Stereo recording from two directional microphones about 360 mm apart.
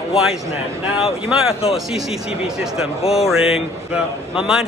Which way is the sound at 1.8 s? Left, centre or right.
Centre.